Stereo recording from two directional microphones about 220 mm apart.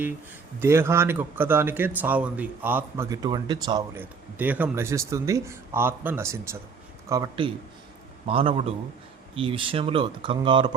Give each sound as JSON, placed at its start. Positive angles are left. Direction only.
{"t": 0.6, "sound": "speech", "side_deg": -10}